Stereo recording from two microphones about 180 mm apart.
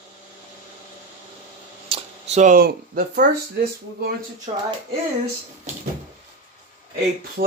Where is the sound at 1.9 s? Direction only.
40° right (ahead or behind); by 4.1 s 60° right (ahead or behind).